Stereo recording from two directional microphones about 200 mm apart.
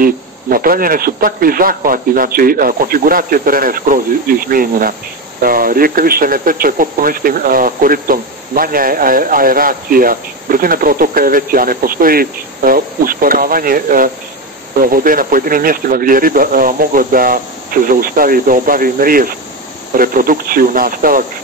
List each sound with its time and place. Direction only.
0.0 s speech: 45° right (ahead or behind)